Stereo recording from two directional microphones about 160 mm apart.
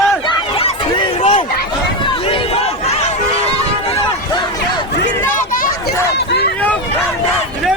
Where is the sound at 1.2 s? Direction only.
40° left (ahead or behind).